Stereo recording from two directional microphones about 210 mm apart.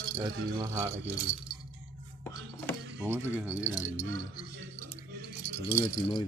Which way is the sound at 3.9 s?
30° right (ahead or behind).